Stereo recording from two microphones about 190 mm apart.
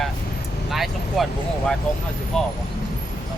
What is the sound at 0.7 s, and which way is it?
Speech, centre (ahead or behind).